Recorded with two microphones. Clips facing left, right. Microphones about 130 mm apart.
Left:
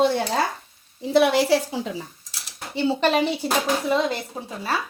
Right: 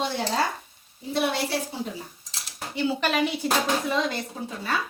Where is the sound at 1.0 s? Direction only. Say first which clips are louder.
Left 8 dB; 90° left.